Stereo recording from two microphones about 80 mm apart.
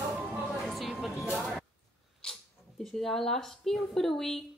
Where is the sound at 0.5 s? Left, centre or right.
Centre.